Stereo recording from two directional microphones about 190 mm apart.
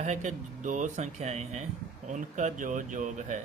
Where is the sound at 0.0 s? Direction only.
40° right (ahead or behind).